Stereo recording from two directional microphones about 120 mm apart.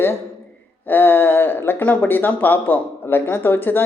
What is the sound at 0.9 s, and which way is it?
Speech, 15° left (ahead or behind).